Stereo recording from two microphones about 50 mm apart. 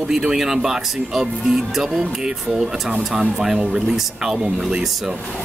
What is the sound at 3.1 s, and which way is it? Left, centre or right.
Speech, centre.